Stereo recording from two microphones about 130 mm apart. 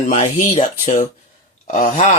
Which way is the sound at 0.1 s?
60° left (ahead or behind).